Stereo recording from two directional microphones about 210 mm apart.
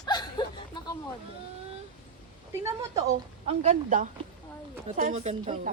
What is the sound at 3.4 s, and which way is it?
A woman's voice, 30° right (ahead or behind).